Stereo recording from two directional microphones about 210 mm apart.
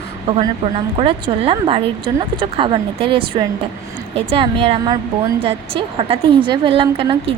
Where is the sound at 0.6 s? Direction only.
25° right (ahead or behind).